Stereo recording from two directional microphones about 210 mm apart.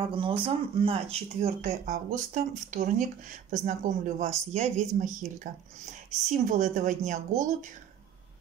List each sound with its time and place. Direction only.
0.0 s speech: 25° right (ahead or behind)
1.6 s speech: 40° right (ahead or behind)